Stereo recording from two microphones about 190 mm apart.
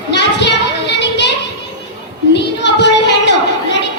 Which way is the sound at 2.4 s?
65° left (ahead or behind).